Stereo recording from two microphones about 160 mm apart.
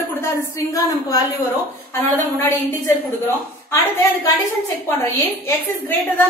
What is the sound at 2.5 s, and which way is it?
Speech, 10° left (ahead or behind).